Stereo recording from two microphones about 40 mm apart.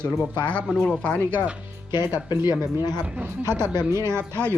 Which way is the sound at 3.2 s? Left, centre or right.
Right.